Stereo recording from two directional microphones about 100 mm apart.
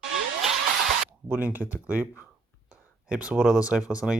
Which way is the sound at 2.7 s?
10° right (ahead or behind).